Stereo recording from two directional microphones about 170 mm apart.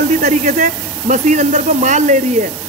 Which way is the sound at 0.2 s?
45° right (ahead or behind).